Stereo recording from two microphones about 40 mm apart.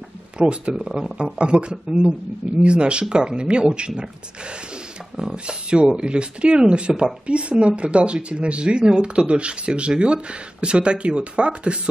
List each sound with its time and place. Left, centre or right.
0.4 s speech: right